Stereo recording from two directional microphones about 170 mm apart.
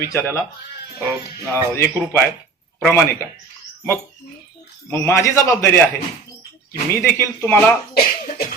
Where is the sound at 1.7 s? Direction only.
15° left (ahead or behind).